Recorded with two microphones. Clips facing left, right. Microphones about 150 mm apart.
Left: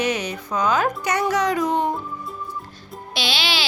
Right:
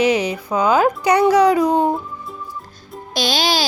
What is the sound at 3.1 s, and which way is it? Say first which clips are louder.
Speech: right 6 dB; 40° right (ahead or behind).